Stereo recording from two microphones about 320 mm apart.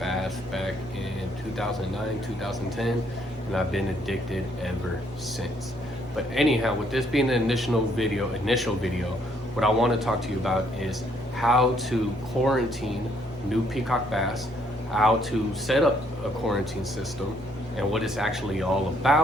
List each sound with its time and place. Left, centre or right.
0.0 s a sound: centre
2.4 s a man's voice: centre
6.1 s a man's voice: centre
17.7 s a man's voice: centre